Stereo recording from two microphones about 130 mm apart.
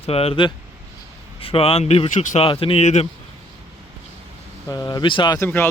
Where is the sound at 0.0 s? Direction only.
50° left (ahead or behind).